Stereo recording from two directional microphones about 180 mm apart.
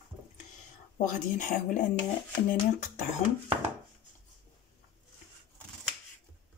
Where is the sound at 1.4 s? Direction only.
45° left (ahead or behind).